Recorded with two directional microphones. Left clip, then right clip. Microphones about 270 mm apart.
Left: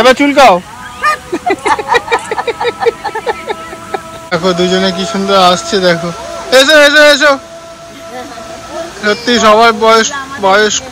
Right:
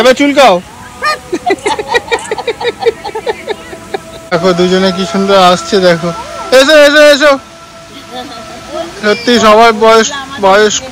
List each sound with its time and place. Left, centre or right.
0.0 s speech: centre
1.0 s a sound: centre
4.3 s speech: centre
9.0 s speech: centre